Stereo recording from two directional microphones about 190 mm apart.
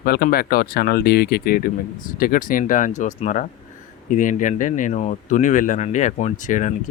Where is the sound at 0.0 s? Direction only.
55° left (ahead or behind).